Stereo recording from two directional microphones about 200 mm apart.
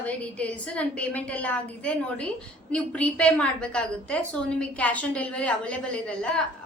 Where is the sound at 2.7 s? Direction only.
5° left (ahead or behind).